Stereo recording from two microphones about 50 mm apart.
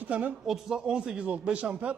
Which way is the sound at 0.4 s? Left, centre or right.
Centre.